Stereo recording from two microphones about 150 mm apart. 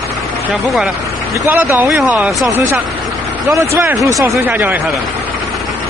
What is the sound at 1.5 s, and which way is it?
Speech, 10° right (ahead or behind).